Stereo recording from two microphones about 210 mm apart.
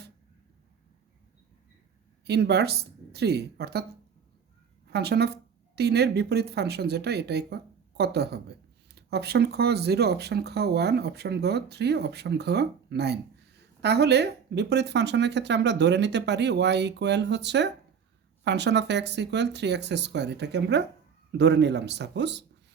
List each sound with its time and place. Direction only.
2.2 s speech: 50° right (ahead or behind)
4.9 s speech: 50° right (ahead or behind)